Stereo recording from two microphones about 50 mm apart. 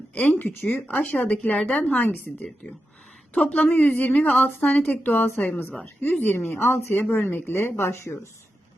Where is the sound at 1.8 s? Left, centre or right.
Left.